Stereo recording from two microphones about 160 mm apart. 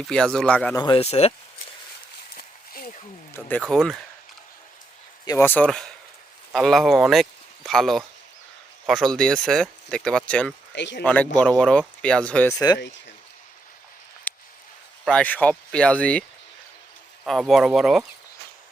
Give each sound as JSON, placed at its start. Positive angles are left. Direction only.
{"t": 0.1, "sound": "speech", "side_deg": 5}
{"t": 0.8, "sound": "speech", "side_deg": 35}
{"t": 2.3, "sound": "a sound", "side_deg": 65}
{"t": 3.3, "sound": "speech", "side_deg": 10}
{"t": 5.2, "sound": "speech", "side_deg": 15}
{"t": 10.7, "sound": "speech", "side_deg": 90}
{"t": 11.0, "sound": "speech", "side_deg": 10}
{"t": 12.5, "sound": "speech", "side_deg": 25}
{"t": 14.3, "sound": "a sound", "side_deg": 10}
{"t": 15.0, "sound": "speech", "side_deg": 10}
{"t": 17.2, "sound": "speech", "side_deg": 0}